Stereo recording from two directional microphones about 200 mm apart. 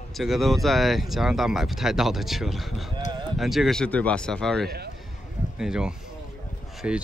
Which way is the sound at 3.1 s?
20° right (ahead or behind).